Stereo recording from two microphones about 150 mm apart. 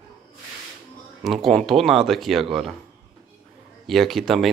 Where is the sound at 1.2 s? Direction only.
Centre (ahead or behind).